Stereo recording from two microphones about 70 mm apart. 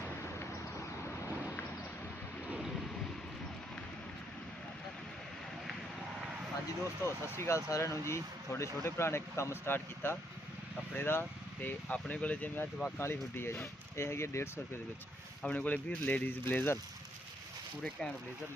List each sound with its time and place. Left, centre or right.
7.0 s speech: left
13.0 s speech: left
15.4 s speech: left